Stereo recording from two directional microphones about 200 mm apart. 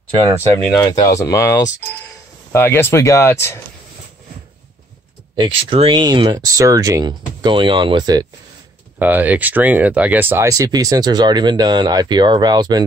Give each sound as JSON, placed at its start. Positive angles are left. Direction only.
{"t": 0.3, "sound": "speech", "side_deg": 10}
{"t": 5.3, "sound": "speech", "side_deg": -25}
{"t": 8.9, "sound": "speech", "side_deg": -10}